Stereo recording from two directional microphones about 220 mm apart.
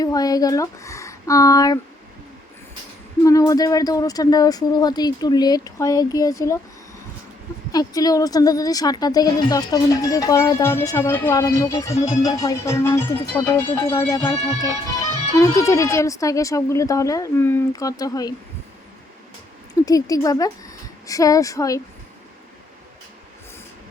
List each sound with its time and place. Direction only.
0.0 s speech: 15° left (ahead or behind)
3.2 s a woman's voice: 15° left (ahead or behind)
7.7 s a woman's voice: 15° left (ahead or behind)
15.4 s a woman's voice: 15° left (ahead or behind)
19.8 s a woman's voice: 15° left (ahead or behind)